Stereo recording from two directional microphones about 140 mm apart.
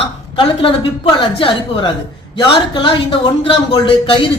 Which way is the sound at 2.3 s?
40° left (ahead or behind).